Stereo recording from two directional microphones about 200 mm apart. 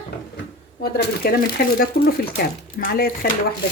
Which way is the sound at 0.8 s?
50° left (ahead or behind).